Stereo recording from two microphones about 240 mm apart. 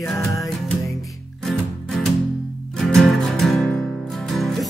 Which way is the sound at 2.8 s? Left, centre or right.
Centre.